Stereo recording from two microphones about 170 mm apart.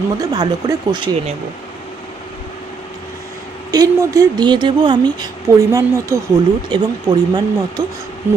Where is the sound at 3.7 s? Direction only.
20° right (ahead or behind).